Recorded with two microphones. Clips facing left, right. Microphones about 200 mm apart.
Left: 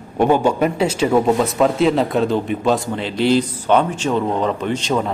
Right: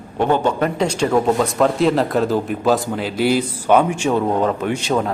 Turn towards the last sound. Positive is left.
turn(degrees=-5)  # may be behind; listen again after turning